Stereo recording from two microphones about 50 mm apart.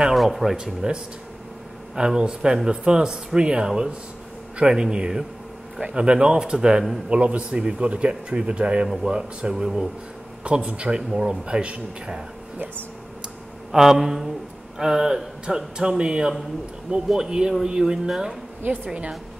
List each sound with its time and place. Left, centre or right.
0.0 s speech: centre
2.0 s speech: centre
7.1 s speech: right
8.8 s speech: centre
9.1 s speech: centre
10.4 s speech: right
11.0 s speech: centre
13.7 s speech: centre
18.6 s a woman's voice: right